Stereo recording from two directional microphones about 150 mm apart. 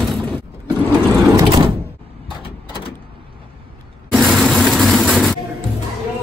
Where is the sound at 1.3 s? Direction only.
35° right (ahead or behind).